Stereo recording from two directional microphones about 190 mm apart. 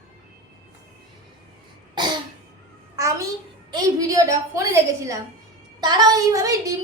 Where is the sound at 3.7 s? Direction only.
20° right (ahead or behind).